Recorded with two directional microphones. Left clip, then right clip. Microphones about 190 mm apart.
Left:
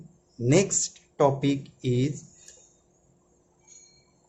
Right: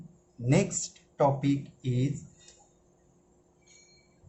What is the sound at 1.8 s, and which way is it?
Speech, 45° left (ahead or behind).